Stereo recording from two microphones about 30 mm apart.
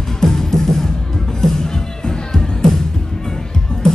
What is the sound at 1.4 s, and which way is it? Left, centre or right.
Music, centre.